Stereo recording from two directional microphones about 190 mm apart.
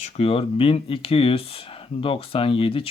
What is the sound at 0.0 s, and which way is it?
Speech, 30° left (ahead or behind).